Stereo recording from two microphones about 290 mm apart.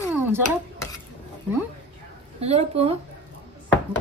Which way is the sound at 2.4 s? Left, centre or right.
Right.